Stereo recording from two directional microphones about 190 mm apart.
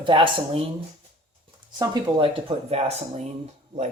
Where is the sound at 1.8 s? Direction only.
20° right (ahead or behind).